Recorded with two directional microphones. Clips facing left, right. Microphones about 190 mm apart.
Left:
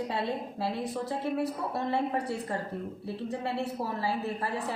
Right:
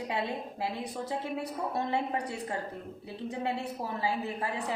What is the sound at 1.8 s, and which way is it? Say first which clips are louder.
Speech: left 2 dB; 15° right (ahead or behind).